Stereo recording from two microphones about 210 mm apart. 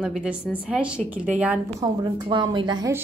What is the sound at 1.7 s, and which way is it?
A woman's voice, 20° right (ahead or behind).